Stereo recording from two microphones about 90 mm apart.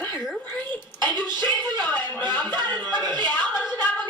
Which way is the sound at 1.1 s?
50° right (ahead or behind).